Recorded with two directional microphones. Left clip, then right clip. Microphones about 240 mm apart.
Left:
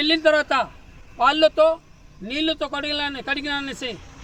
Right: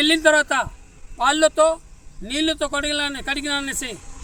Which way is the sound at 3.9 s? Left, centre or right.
Right.